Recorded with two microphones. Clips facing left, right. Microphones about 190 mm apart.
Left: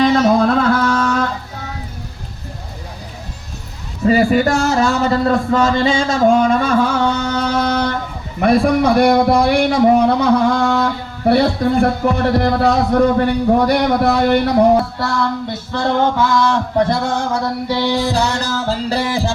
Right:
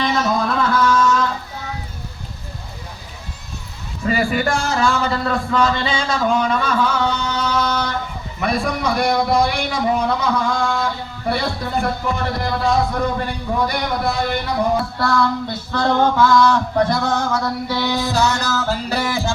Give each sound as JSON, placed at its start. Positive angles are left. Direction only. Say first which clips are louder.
{"t": 0.0, "sound": "music", "louder": "left 7 dB", "side_deg": 55}
{"t": 4.0, "sound": "a man's voice", "louder": "left 6 dB", "side_deg": 35}
{"t": 15.7, "sound": "music", "louder": "left 1 dB", "side_deg": 25}